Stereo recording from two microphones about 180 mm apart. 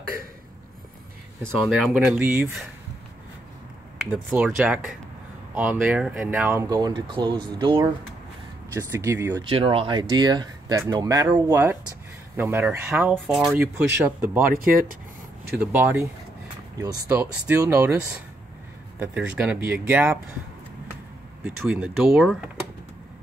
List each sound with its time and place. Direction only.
1.4 s speech: 5° left (ahead or behind)
2.0 s speech: 10° right (ahead or behind)
4.3 s speech: 5° right (ahead or behind)
9.4 s speech: 30° right (ahead or behind); by 14.1 s 10° right (ahead or behind)
14.5 s speech: 55° right (ahead or behind)
15.5 s speech: 10° right (ahead or behind)
21.5 s speech: 5° right (ahead or behind)